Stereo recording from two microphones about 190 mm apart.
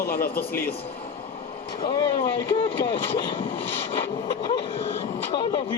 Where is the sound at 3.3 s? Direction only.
25° left (ahead or behind).